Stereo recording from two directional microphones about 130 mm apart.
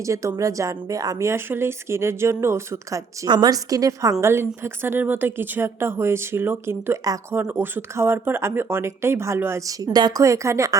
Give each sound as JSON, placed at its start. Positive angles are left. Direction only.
{"t": 0.0, "sound": "a woman's voice", "side_deg": -25}
{"t": 3.2, "sound": "a woman's voice", "side_deg": -35}